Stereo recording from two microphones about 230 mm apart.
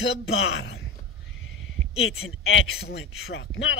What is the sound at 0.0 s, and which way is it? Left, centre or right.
Speech, left.